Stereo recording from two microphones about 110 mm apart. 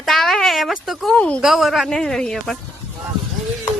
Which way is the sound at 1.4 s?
5° right (ahead or behind).